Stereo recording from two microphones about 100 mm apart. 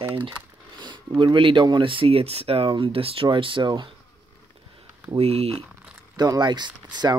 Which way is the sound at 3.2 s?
55° right (ahead or behind).